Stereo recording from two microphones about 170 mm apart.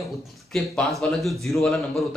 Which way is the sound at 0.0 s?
Centre (ahead or behind).